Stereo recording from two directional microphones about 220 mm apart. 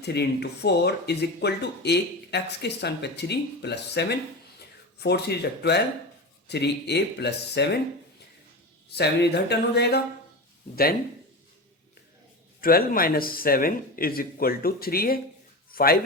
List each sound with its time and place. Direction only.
0.0 s speech: 50° left (ahead or behind)
8.9 s speech: 50° left (ahead or behind)
12.5 s speech: 40° left (ahead or behind)